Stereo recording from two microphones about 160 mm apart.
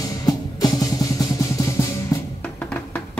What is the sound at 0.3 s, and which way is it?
Music, 25° left (ahead or behind).